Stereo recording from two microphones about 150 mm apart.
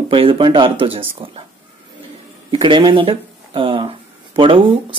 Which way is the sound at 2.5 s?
35° right (ahead or behind).